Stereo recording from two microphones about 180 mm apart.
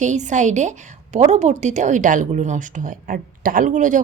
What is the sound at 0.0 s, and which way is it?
Speech, 40° right (ahead or behind).